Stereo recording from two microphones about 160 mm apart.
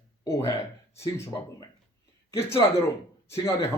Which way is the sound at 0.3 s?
20° left (ahead or behind).